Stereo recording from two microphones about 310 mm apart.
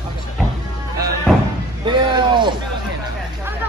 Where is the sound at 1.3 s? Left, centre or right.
Centre.